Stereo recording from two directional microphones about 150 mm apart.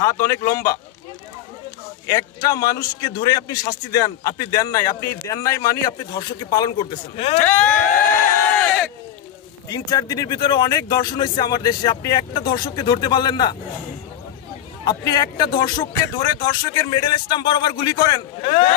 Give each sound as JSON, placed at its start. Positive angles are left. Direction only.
{"t": 0.0, "sound": "a man's voice", "side_deg": 20}
{"t": 2.0, "sound": "a man's voice", "side_deg": 25}
{"t": 7.4, "sound": "a sound", "side_deg": 10}
{"t": 9.7, "sound": "a man's voice", "side_deg": 25}
{"t": 14.9, "sound": "a man's voice", "side_deg": 30}
{"t": 18.4, "sound": "speech", "side_deg": 40}